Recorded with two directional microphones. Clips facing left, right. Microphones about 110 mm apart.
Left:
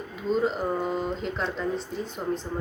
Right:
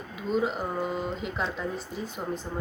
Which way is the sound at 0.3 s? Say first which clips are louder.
Left 3 dB; 5° right (ahead or behind).